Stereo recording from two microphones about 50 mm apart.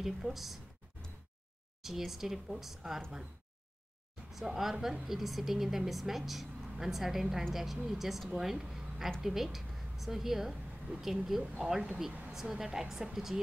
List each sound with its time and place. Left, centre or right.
0.0 s speech: centre
1.8 s speech: centre
4.3 s a woman's voice: centre
10.9 s a woman's voice: right